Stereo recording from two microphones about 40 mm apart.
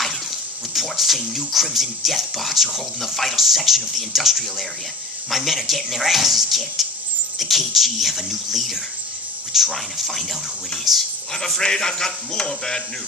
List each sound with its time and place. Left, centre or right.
0.7 s speech: centre
11.3 s speech: centre